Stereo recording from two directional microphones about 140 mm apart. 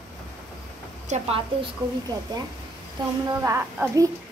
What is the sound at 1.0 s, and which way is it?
Speech, 55° right (ahead or behind).